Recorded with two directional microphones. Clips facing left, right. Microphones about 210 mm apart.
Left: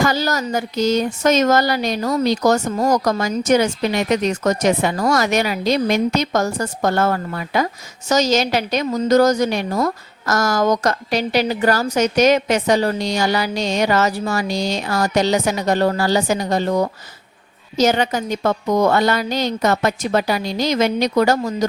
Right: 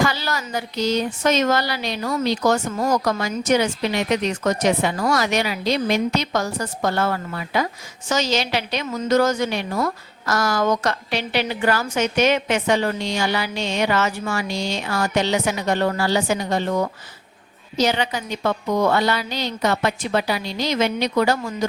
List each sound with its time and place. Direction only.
0.0 s a woman's voice: 45° left (ahead or behind)